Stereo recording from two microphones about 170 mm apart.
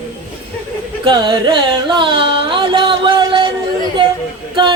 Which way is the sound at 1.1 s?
25° right (ahead or behind).